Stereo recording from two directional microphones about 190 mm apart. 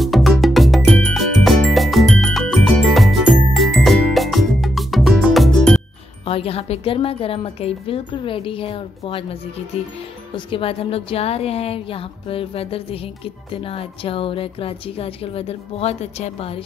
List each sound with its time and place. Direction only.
0.0 s music: centre (ahead or behind)
6.2 s a woman's voice: 30° left (ahead or behind)